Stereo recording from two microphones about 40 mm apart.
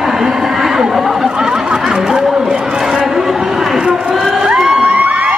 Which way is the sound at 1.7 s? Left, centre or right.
Centre.